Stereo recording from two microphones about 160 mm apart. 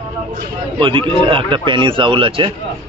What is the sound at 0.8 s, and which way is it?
A man's voice, 30° right (ahead or behind).